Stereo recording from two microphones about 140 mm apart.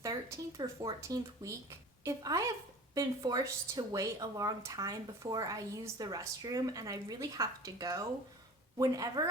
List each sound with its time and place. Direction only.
0.0 s speech: 25° right (ahead or behind)